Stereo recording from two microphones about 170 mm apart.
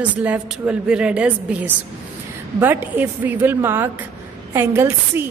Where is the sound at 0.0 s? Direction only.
10° right (ahead or behind).